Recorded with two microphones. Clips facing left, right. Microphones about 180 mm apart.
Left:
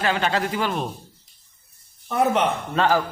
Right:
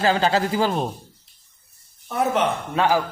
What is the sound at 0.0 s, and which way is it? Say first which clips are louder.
Speech: right 3 dB; 30° right (ahead or behind).